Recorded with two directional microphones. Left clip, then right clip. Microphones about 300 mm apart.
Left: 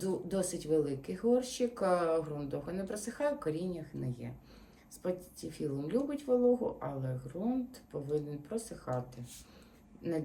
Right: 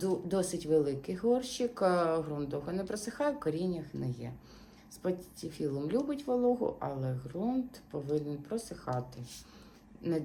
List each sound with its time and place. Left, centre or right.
0.0 s speech: centre